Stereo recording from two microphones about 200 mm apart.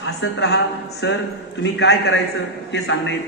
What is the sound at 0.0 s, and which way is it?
A woman's voice, 65° left (ahead or behind).